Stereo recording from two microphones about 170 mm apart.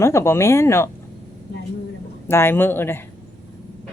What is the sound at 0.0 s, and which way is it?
Speech, 15° left (ahead or behind).